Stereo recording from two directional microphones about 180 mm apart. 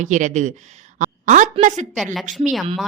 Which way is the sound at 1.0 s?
40° right (ahead or behind).